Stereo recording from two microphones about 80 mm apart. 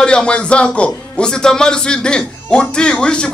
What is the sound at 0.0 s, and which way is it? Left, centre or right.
A man's voice, centre.